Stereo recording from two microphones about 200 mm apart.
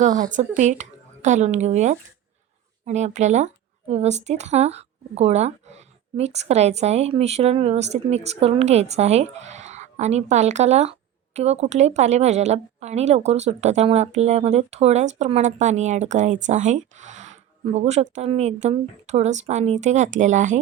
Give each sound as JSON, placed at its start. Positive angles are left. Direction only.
{"t": 0.0, "sound": "speech", "side_deg": -40}